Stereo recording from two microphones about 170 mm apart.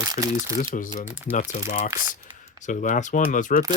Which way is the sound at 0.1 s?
25° right (ahead or behind).